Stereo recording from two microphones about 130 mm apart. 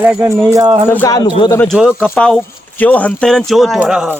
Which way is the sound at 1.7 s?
5° right (ahead or behind).